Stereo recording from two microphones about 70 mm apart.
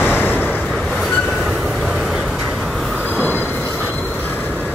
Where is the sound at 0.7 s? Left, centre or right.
Centre.